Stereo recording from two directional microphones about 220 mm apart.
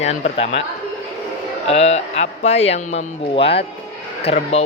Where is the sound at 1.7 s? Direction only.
30° left (ahead or behind).